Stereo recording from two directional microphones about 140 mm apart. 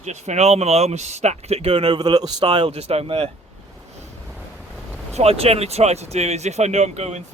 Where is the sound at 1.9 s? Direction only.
30° right (ahead or behind).